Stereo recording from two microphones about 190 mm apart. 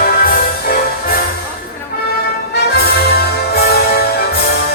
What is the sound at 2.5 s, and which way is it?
Music, 60° left (ahead or behind).